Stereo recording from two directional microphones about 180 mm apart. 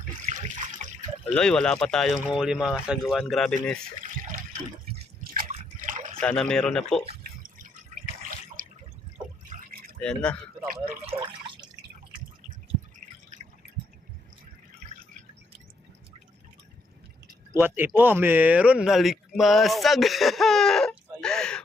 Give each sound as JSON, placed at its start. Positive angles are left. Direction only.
{"t": 0.3, "sound": "water", "side_deg": -45}
{"t": 1.4, "sound": "speech", "side_deg": 5}
{"t": 4.0, "sound": "water", "side_deg": -50}
{"t": 6.1, "sound": "speech", "side_deg": 5}
{"t": 8.6, "sound": "drip", "side_deg": -50}
{"t": 9.5, "sound": "liquid", "side_deg": -50}
{"t": 10.0, "sound": "speech", "side_deg": 5}
{"t": 11.0, "sound": "drip", "side_deg": -30}
{"t": 17.5, "sound": "speech", "side_deg": -10}